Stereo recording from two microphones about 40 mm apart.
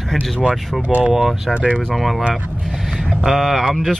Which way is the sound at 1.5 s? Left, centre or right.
Right.